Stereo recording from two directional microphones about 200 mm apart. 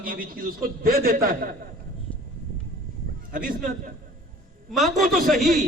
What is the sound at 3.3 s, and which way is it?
Speech, 40° right (ahead or behind).